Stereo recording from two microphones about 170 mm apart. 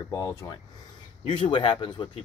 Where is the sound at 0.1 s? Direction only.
20° left (ahead or behind).